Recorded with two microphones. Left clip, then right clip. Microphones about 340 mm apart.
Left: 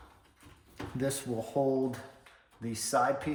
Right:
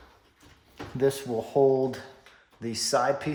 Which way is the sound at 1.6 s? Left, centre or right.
Right.